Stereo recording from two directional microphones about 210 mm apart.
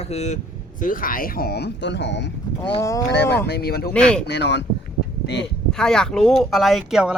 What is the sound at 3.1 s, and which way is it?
Speech, 55° left (ahead or behind).